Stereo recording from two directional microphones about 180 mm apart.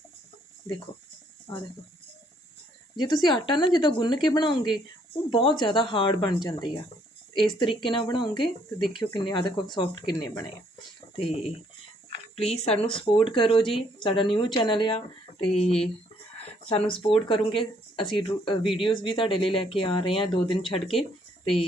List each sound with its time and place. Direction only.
1.5 s speech: 25° left (ahead or behind)
2.9 s speech: 25° left (ahead or behind)